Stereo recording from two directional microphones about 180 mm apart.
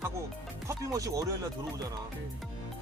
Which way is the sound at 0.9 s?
20° right (ahead or behind).